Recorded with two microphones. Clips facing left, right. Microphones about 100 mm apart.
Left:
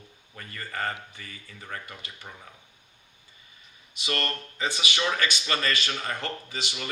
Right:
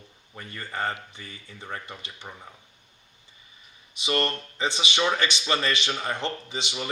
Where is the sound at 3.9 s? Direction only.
20° right (ahead or behind).